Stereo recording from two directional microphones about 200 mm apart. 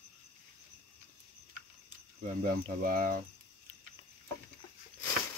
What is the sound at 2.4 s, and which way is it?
Speech, 45° right (ahead or behind).